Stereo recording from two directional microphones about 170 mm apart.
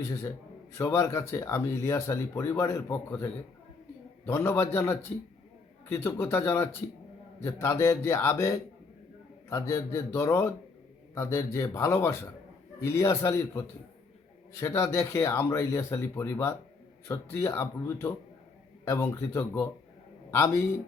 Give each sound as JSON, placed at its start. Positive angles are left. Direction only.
{"t": 0.0, "sound": "speech", "side_deg": 15}
{"t": 4.3, "sound": "speech", "side_deg": 15}